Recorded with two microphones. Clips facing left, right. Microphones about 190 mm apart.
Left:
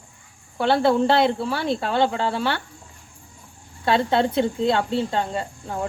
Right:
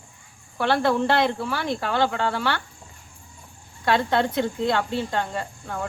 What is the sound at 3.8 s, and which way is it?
Speech, 25° left (ahead or behind).